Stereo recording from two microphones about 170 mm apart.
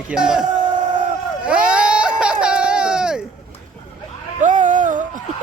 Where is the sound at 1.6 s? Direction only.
5° right (ahead or behind).